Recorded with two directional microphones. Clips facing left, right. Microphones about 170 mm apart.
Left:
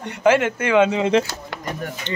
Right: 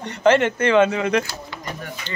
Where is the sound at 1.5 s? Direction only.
75° left (ahead or behind).